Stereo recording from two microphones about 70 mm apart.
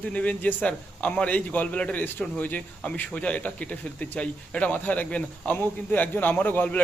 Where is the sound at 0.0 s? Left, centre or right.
Centre.